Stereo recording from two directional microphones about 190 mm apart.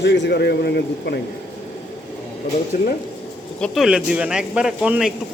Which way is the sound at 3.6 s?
Centre (ahead or behind).